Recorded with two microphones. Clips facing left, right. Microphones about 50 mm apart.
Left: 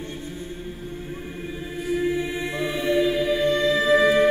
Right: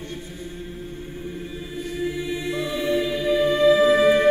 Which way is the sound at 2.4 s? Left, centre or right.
Left.